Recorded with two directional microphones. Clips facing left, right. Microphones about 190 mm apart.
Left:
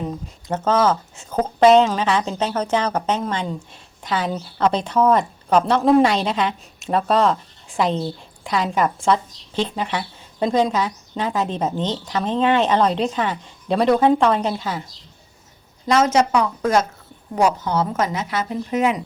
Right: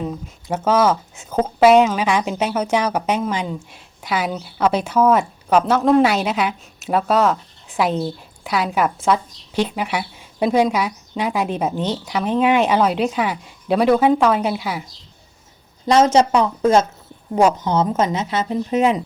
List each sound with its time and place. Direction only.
0.4 s a woman's voice: 10° right (ahead or behind)
15.9 s a woman's voice: 30° right (ahead or behind)